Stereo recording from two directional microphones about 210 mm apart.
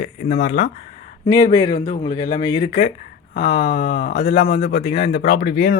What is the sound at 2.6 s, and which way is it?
Speech, 35° left (ahead or behind).